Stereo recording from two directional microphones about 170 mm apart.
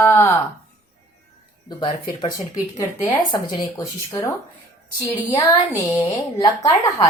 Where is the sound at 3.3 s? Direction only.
25° left (ahead or behind).